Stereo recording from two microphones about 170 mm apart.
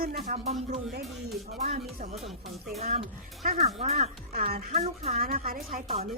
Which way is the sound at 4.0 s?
60° right (ahead or behind).